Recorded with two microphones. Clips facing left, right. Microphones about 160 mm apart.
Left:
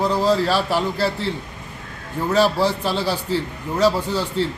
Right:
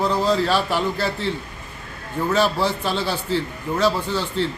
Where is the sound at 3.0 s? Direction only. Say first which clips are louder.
Left 1 dB; 10° left (ahead or behind).